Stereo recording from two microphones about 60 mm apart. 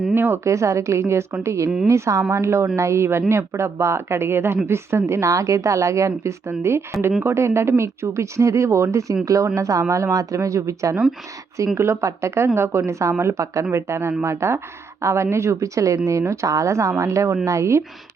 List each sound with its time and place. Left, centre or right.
0.1 s speech: right
0.4 s speech: right
6.5 s speech: right